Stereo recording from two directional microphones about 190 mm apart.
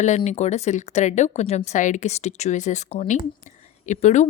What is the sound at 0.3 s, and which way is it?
Speech, 35° left (ahead or behind).